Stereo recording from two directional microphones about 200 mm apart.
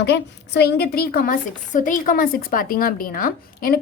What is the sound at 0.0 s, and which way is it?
A woman's voice, 60° left (ahead or behind).